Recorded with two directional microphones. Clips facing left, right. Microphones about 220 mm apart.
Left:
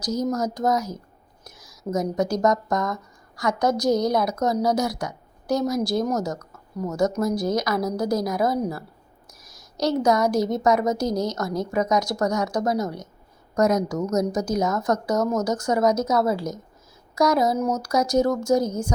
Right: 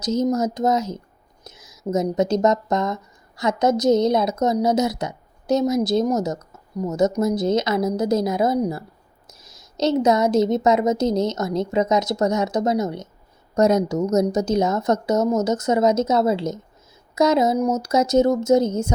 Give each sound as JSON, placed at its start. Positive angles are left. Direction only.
{"t": 0.0, "sound": "a woman's voice", "side_deg": -25}